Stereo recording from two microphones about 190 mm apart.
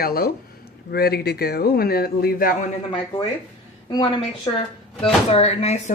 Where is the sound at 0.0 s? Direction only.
55° left (ahead or behind).